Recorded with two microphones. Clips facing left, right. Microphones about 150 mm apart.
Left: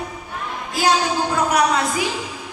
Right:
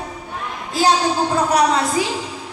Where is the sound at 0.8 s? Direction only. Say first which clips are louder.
Right 2 dB; 30° right (ahead or behind).